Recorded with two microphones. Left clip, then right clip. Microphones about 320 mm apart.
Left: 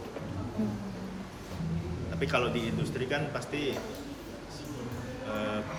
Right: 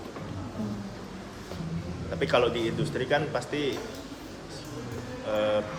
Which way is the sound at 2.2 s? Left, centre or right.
Right.